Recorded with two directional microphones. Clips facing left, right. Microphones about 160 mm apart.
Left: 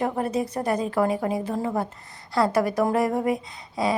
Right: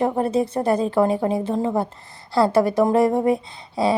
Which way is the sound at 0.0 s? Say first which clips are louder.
Right 5 dB; 25° right (ahead or behind).